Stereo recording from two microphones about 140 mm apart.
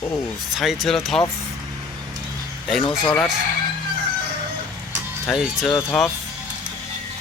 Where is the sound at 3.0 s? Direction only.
5° left (ahead or behind).